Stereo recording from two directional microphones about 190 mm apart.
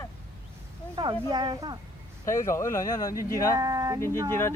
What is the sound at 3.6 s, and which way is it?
Speech, 20° right (ahead or behind).